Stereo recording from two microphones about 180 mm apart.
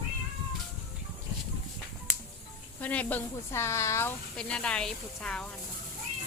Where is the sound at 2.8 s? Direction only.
10° left (ahead or behind).